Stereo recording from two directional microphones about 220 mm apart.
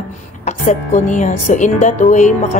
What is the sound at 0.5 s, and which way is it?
Speech, 35° left (ahead or behind).